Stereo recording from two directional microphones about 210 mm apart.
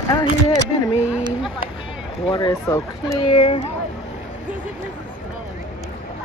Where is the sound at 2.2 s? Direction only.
20° left (ahead or behind).